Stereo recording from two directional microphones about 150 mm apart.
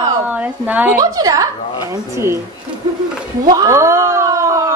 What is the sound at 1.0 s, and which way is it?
Speech, 25° right (ahead or behind).